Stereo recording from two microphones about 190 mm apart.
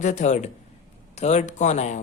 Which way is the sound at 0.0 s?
40° left (ahead or behind).